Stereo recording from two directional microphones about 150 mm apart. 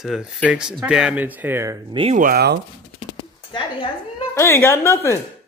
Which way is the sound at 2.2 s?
80° right.